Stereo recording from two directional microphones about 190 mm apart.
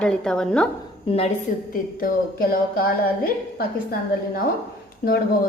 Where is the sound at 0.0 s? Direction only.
5° left (ahead or behind).